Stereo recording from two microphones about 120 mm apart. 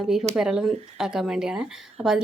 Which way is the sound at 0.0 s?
Centre (ahead or behind).